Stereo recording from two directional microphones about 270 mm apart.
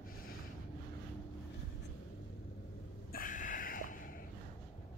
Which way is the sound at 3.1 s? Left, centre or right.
Left.